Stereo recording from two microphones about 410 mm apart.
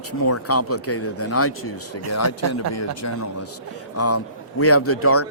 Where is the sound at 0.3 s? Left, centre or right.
Left.